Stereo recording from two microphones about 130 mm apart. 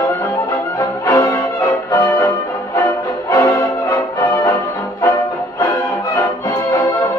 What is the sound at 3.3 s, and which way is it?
Music, 25° left (ahead or behind).